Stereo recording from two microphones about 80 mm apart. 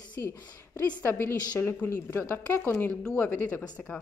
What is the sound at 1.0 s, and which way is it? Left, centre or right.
A woman's voice, left.